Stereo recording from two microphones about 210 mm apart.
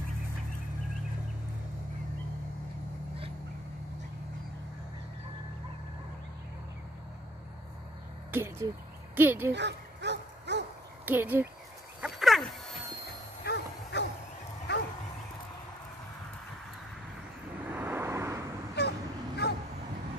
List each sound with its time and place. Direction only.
8.3 s speech: 10° right (ahead or behind)
9.5 s dog: 55° right (ahead or behind)
11.1 s speech: 10° right (ahead or behind)
12.0 s a sound: centre (ahead or behind)
13.4 s a sound: 50° left (ahead or behind)
17.6 s vehicle: 10° right (ahead or behind)
18.8 s vehicle: 50° left (ahead or behind)